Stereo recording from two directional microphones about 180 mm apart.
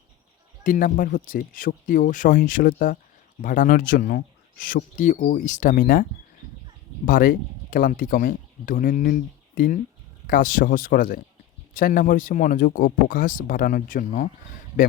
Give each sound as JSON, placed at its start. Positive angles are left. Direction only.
{"t": 0.6, "sound": "speech", "side_deg": 50}